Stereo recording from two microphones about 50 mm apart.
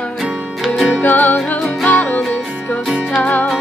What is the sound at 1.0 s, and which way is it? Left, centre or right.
Music, left.